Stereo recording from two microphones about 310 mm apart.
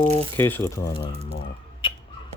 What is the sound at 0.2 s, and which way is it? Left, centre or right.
Speech, centre.